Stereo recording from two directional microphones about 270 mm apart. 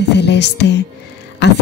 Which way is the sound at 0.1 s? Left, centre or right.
Left.